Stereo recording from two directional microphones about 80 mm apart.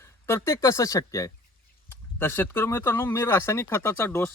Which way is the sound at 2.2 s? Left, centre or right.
Left.